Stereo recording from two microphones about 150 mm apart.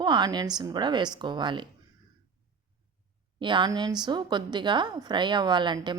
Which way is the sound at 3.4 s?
30° right (ahead or behind).